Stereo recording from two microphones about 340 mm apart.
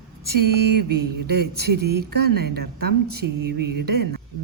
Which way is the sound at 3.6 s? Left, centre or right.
Right.